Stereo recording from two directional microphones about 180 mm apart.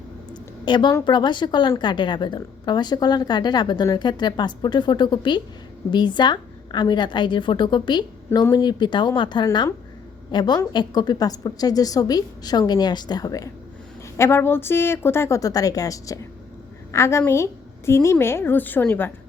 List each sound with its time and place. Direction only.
0.6 s a woman's voice: 25° left (ahead or behind)